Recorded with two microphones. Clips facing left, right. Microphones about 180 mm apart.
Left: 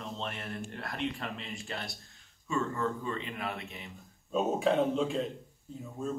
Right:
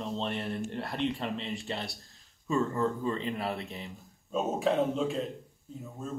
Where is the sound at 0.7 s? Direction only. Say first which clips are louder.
Right 2 dB; 30° right (ahead or behind).